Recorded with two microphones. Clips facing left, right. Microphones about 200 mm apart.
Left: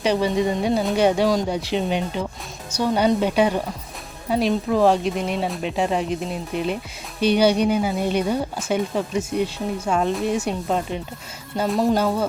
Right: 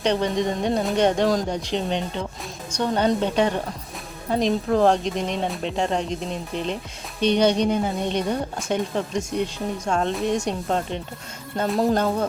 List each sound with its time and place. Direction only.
0.0 s speech: 5° left (ahead or behind)